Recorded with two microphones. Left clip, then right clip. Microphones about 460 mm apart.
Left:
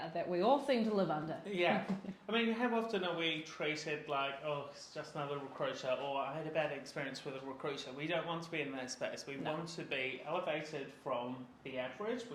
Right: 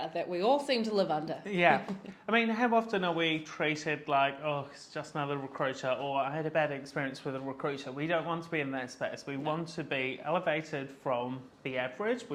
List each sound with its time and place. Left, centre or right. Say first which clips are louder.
0.1 s speech: right 3 dB; centre
1.5 s speech: right 8 dB; right
12.0 s speech: right 9 dB; right